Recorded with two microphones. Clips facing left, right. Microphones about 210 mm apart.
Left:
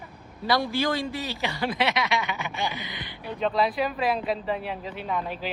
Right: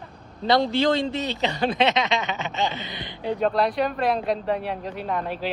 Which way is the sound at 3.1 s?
20° right (ahead or behind).